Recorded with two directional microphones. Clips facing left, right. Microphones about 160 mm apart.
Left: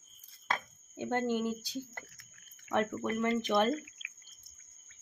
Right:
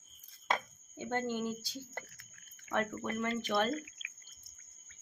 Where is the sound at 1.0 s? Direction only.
15° left (ahead or behind).